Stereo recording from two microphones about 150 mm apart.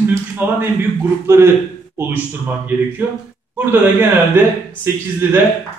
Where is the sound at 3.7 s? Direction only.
15° right (ahead or behind).